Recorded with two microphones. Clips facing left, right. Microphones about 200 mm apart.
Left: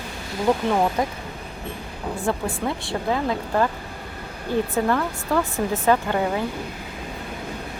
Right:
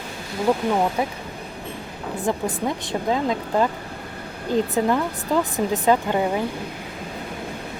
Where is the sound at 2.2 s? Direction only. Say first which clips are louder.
Right 2 dB; 20° right (ahead or behind).